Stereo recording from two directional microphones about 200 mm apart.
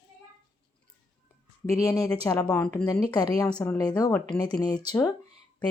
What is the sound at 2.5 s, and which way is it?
Speech, 5° left (ahead or behind).